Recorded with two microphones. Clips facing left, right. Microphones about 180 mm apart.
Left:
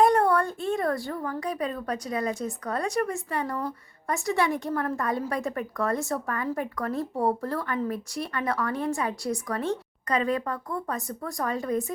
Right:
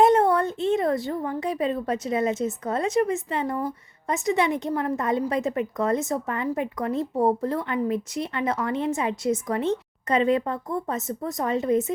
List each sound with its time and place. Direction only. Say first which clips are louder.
0.0 s a woman's voice: right 3 dB; 20° right (ahead or behind)